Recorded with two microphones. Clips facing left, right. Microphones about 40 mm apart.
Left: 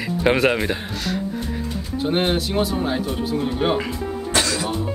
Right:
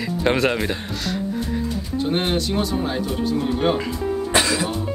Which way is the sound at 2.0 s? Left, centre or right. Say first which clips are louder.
Left 2 dB; centre.